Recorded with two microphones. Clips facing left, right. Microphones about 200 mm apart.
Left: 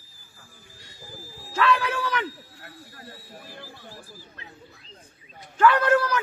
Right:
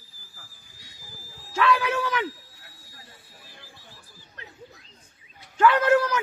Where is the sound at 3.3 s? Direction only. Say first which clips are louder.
Left 8 dB; 55° left (ahead or behind).